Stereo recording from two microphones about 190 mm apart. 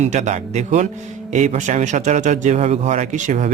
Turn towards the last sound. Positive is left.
turn(degrees=-40)  # may be behind; listen again after turning